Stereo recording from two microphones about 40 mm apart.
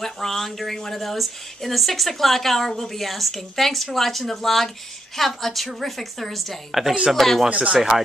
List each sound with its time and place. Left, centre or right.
0.0 s speech: centre
7.4 s speech: right
7.7 s speech: centre